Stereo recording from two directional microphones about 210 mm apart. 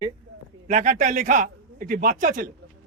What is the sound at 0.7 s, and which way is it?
A man's voice, 35° right (ahead or behind).